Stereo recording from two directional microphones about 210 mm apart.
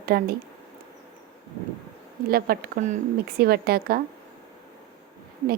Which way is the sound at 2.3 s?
45° right (ahead or behind).